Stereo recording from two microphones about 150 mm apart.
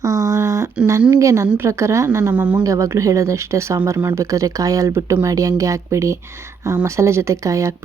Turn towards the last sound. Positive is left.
turn(degrees=-20)  # may be behind; listen again after turning